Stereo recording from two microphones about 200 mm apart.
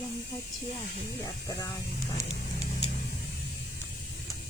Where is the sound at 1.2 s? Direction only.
20° left (ahead or behind).